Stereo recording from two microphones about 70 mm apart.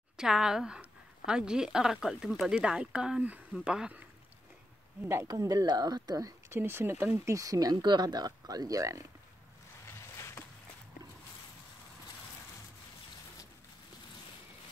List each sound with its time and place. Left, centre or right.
0.2 s a woman's voice: centre
5.0 s speech: right
5.3 s speech: right
6.5 s speech: right
7.2 s speech: right